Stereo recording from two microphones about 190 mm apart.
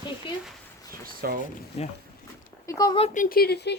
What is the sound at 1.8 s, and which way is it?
Speech, 35° left (ahead or behind).